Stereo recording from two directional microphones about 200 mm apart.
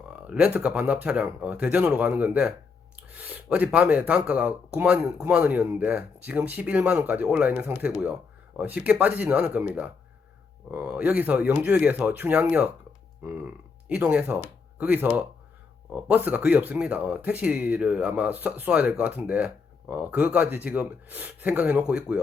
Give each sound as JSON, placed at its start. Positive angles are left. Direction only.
{"t": 0.3, "sound": "speech", "side_deg": -5}
{"t": 13.8, "sound": "speech", "side_deg": -5}